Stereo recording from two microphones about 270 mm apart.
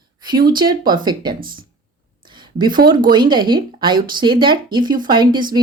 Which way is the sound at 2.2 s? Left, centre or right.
Centre.